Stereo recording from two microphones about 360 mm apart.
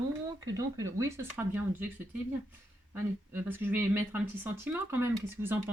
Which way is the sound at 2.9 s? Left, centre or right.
Centre.